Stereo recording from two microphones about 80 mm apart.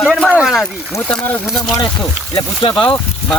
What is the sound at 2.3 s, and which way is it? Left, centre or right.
Speech, left.